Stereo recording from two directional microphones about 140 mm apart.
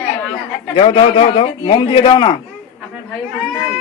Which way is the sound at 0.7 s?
40° left (ahead or behind).